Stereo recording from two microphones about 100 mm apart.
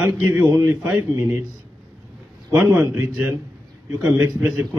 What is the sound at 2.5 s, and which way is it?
Speech, 10° right (ahead or behind).